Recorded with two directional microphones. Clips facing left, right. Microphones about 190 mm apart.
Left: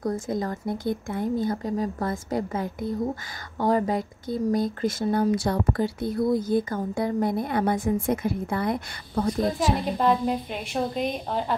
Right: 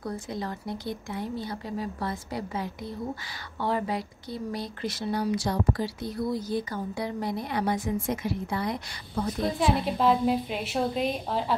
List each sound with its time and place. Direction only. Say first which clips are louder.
0.0 s speech: left 6 dB; 45° left (ahead or behind)
9.9 s a woman's voice: even; 5° right (ahead or behind)